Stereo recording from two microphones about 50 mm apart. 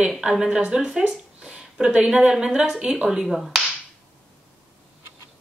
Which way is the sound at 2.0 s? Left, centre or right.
Centre.